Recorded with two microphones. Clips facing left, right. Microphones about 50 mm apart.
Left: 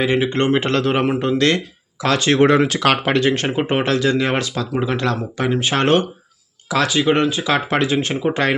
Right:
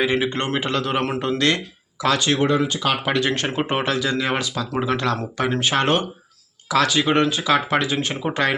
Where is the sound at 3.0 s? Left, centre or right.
Left.